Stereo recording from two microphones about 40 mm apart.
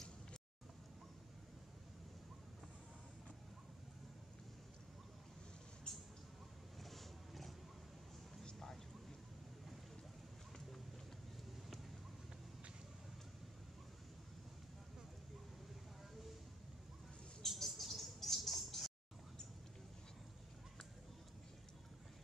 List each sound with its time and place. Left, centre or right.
5.9 s vehicle: centre
6.8 s roaring cats: centre
17.4 s rodents: centre